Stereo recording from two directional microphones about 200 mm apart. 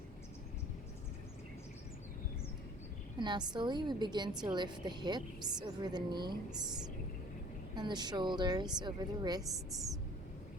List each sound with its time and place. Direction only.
3.2 s a woman's voice: 20° right (ahead or behind)
7.8 s a woman's voice: 20° right (ahead or behind)